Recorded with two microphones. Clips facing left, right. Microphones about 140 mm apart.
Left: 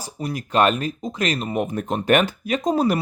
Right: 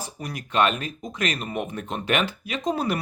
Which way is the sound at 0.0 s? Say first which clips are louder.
Left 6 dB; 35° left (ahead or behind).